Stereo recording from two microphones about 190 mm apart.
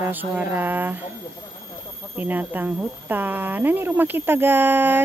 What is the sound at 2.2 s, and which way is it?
Speech, 10° right (ahead or behind).